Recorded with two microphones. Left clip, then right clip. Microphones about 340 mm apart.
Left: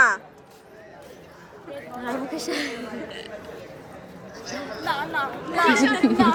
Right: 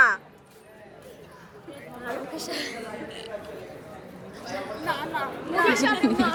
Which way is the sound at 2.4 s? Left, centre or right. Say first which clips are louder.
Left 4 dB; left.